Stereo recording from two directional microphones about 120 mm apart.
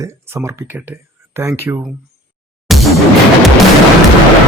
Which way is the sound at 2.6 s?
Centre (ahead or behind).